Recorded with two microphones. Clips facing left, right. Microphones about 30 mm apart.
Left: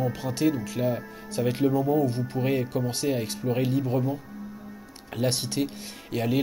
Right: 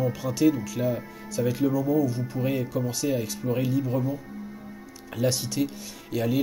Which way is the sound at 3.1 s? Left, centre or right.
Left.